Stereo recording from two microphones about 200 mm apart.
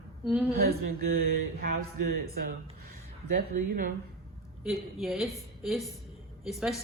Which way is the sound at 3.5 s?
45° right (ahead or behind).